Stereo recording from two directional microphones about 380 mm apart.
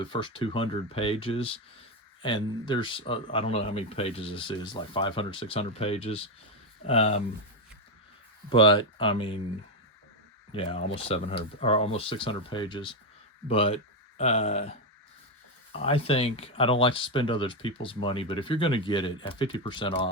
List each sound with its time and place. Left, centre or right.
0.0 s speech: centre
8.4 s speech: centre
10.5 s speech: centre
15.7 s speech: centre